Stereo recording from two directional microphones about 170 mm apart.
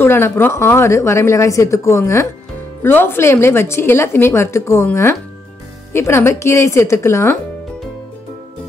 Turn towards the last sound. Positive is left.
turn(degrees=15)  # may be behind; listen again after turning